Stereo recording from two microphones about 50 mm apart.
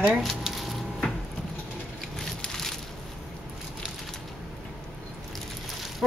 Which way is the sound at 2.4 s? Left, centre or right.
Centre.